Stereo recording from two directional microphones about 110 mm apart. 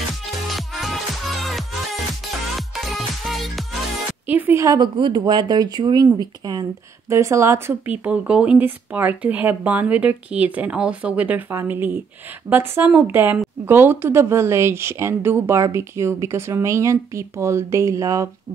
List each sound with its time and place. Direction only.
0.5 s music: centre (ahead or behind)
2.7 s music: centre (ahead or behind)
4.3 s speech: 15° right (ahead or behind)
4.6 s speech: 30° right (ahead or behind)
4.9 s speech: 45° right (ahead or behind)
7.1 s speech: 25° right (ahead or behind)